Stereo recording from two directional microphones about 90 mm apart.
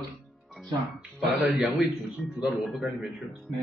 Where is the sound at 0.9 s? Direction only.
5° right (ahead or behind).